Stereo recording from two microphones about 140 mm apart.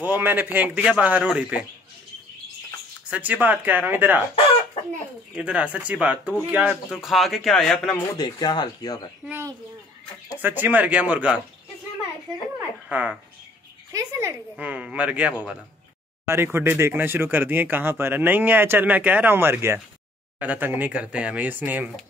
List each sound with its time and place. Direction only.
0.0 s speech: 15° right (ahead or behind)
3.1 s speech: 10° right (ahead or behind)
5.3 s speech: 10° right (ahead or behind)
8.2 s speech: 30° left (ahead or behind)
10.3 s speech: 15° right (ahead or behind)
12.8 s speech: 5° right (ahead or behind)
13.9 s speech: 20° right (ahead or behind)
14.6 s speech: 10° right (ahead or behind)